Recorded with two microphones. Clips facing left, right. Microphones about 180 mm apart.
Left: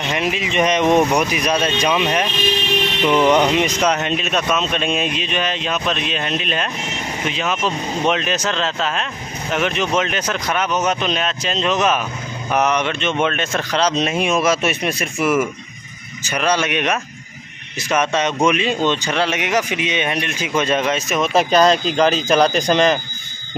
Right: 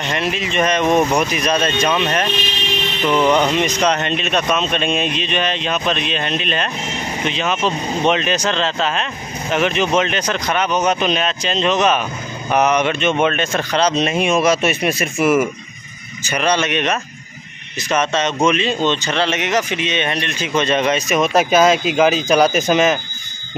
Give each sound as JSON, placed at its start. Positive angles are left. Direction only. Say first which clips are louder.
{"t": 0.0, "sound": "speech", "louder": "even", "side_deg": 10}